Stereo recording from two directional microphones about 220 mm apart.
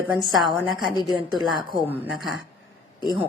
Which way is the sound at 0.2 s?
Centre (ahead or behind).